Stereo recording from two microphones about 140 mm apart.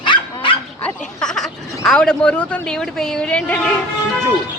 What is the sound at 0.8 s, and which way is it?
A woman's voice, 5° left (ahead or behind).